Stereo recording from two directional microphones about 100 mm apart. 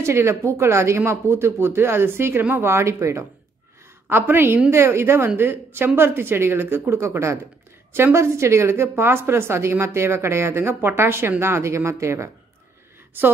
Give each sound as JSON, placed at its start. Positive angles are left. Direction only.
{"t": 0.0, "sound": "a woman's voice", "side_deg": -25}